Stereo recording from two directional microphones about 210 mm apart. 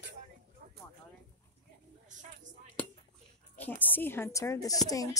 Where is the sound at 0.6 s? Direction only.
45° right (ahead or behind).